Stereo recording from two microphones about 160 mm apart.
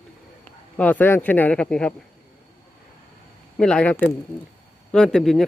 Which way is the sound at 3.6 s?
5° left (ahead or behind).